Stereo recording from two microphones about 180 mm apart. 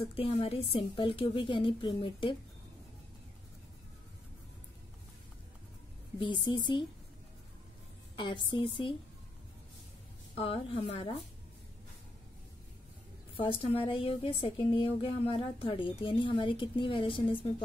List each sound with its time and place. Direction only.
0.1 s speech: 30° left (ahead or behind)
6.1 s speech: 25° left (ahead or behind)
8.2 s speech: 25° left (ahead or behind)
10.3 s a woman's voice: 30° left (ahead or behind)
13.4 s speech: 30° left (ahead or behind)